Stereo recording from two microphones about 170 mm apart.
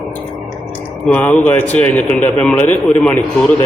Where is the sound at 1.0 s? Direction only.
10° left (ahead or behind).